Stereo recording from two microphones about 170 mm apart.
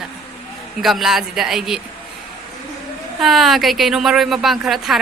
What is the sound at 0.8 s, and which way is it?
Speech, centre (ahead or behind).